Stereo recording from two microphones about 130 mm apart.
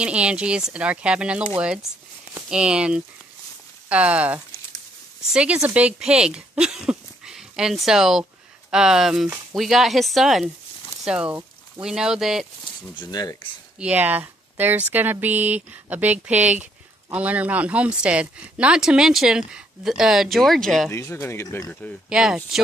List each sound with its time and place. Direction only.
0.0 s speech: 10° right (ahead or behind)
12.6 s speech: 35° left (ahead or behind)
13.7 s speech: 10° right (ahead or behind)
20.9 s speech: 20° left (ahead or behind)
22.1 s speech: 5° right (ahead or behind)